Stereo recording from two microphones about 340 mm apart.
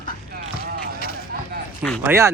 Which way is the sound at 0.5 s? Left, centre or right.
Left.